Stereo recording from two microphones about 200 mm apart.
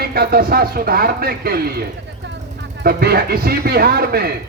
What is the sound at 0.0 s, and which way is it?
A man's voice, 50° right (ahead or behind).